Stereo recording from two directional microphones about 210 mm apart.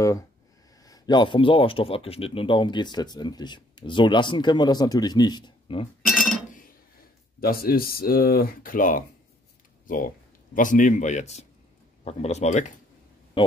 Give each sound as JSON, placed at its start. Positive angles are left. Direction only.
{"t": 0.8, "sound": "speech", "side_deg": 20}
{"t": 6.0, "sound": "chink", "side_deg": 0}
{"t": 7.3, "sound": "a man's voice", "side_deg": 45}